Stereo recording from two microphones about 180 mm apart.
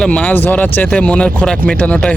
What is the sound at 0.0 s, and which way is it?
Speech, 5° left (ahead or behind).